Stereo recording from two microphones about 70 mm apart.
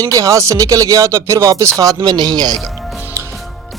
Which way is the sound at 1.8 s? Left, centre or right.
Right.